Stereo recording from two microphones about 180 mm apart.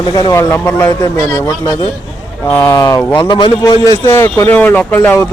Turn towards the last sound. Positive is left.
turn(degrees=10)  # may be behind; listen again after turning